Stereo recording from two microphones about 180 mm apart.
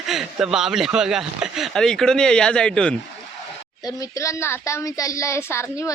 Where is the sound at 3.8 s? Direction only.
20° left (ahead or behind).